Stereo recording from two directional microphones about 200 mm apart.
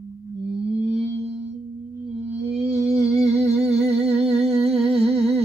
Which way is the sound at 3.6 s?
30° right (ahead or behind).